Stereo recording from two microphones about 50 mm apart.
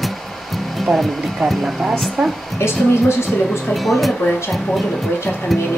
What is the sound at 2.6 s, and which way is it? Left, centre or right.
Speech, left.